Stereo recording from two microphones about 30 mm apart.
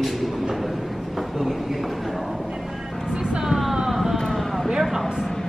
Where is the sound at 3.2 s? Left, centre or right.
Right.